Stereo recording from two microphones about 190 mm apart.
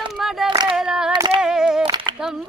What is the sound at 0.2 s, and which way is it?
Female singing, centre (ahead or behind).